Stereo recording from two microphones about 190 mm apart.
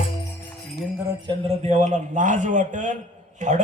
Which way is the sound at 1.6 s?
40° right (ahead or behind).